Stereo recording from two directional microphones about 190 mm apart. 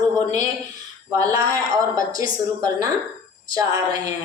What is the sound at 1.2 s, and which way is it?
Speech, 20° right (ahead or behind).